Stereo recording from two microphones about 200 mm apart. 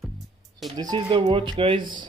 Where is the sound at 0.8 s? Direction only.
20° right (ahead or behind).